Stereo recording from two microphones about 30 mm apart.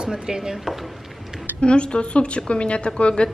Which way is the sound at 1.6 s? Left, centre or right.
Left.